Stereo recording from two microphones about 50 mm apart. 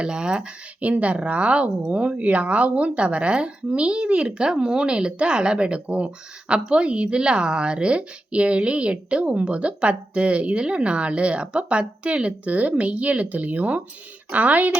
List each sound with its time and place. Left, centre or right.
0.0 s speech: centre